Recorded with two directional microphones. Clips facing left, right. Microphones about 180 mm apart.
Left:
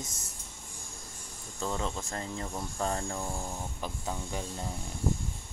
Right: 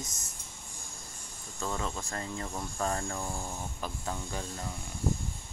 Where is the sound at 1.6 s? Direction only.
20° left (ahead or behind).